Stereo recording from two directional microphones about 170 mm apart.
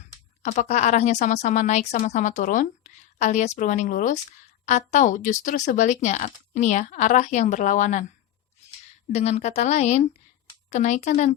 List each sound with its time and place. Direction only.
0.4 s a woman's voice: 45° left (ahead or behind)
9.1 s a woman's voice: 40° left (ahead or behind)